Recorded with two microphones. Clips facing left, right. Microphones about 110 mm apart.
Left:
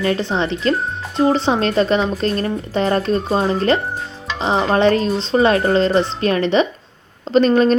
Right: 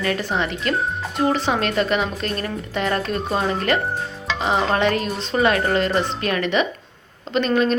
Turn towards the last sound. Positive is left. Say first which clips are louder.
# left 6 dB
turn(degrees=35)  # may be behind; listen again after turning